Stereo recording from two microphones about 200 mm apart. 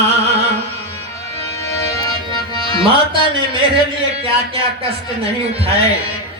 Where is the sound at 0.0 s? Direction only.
30° right (ahead or behind).